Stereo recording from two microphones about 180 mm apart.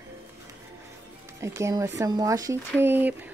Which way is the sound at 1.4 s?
15° right (ahead or behind).